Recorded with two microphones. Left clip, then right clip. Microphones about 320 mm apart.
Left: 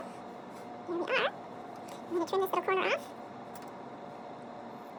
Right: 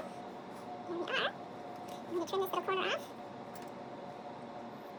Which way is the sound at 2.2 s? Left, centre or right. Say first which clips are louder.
Left 5 dB; centre.